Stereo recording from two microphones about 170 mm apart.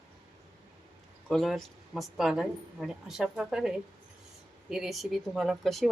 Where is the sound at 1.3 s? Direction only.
Centre (ahead or behind).